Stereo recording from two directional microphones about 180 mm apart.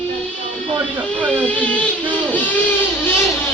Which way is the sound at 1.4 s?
10° left (ahead or behind).